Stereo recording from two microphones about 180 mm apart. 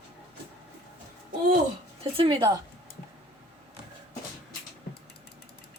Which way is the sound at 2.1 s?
30° right (ahead or behind).